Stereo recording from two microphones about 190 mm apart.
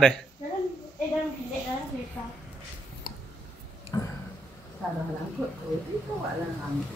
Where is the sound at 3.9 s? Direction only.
20° left (ahead or behind).